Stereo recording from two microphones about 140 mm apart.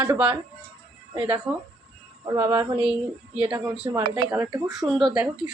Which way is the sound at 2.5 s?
20° right (ahead or behind).